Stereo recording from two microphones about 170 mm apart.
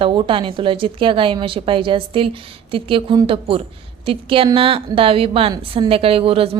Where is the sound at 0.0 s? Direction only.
30° right (ahead or behind).